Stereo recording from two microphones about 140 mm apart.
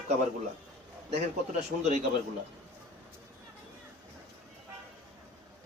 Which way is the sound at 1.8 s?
60° right (ahead or behind).